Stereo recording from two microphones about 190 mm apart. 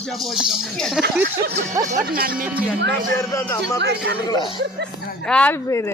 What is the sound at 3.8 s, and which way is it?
Speech, 60° right (ahead or behind).